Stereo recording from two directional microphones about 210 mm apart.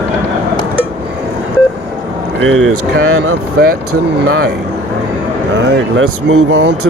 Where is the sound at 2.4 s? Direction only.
70° right (ahead or behind).